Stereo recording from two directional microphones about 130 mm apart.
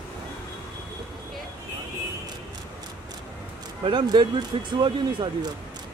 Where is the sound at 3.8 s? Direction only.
35° right (ahead or behind).